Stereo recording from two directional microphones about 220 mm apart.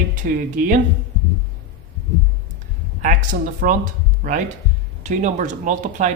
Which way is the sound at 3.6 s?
40° right (ahead or behind).